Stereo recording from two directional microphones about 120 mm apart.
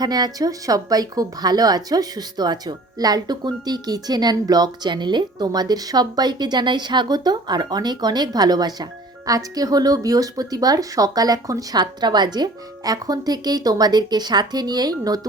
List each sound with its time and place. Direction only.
0.0 s a woman's voice: 35° right (ahead or behind)